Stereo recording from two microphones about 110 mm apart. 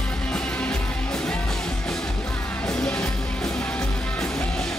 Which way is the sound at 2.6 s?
5° left (ahead or behind).